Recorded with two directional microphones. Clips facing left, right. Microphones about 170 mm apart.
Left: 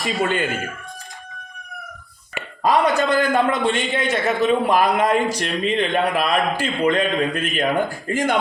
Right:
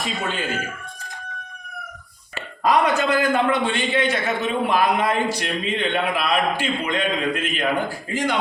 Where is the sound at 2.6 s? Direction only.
30° left (ahead or behind).